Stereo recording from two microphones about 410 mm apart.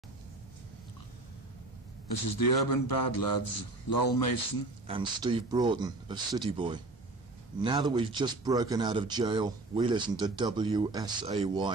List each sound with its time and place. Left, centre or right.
2.0 s a man's voice: left
4.8 s speech: centre